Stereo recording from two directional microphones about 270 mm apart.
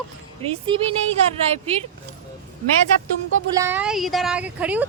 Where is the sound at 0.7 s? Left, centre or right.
Centre.